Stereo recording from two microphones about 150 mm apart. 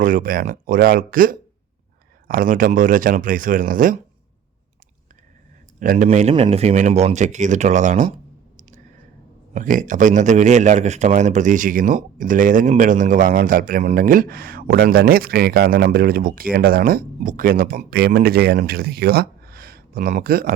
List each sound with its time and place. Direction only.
0.0 s a man's voice: 65° right (ahead or behind)
5.8 s a man's voice: 65° right (ahead or behind)
6.1 s speech: 45° right (ahead or behind)
9.6 s a man's voice: 60° right (ahead or behind)
17.2 s speech: 65° right (ahead or behind); by 20.5 s 80° right